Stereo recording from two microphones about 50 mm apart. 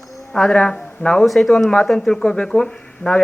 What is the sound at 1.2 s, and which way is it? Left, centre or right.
Speech, centre.